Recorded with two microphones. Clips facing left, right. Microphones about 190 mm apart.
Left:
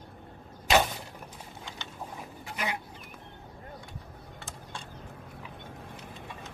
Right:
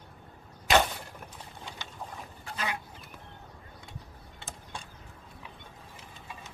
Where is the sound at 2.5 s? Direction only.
20° left (ahead or behind).